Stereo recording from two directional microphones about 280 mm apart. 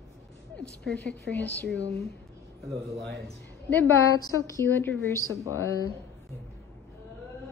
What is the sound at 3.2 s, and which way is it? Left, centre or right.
A woman's voice, centre.